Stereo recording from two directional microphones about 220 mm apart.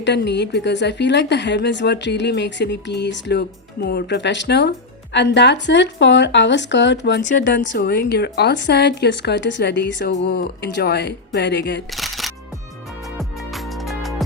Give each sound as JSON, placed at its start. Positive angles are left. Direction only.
{"t": 0.0, "sound": "speech", "side_deg": 50}
{"t": 11.9, "sound": "music", "side_deg": 0}